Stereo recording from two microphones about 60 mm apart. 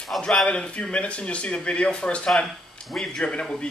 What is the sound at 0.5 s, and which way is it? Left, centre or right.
Speech, centre.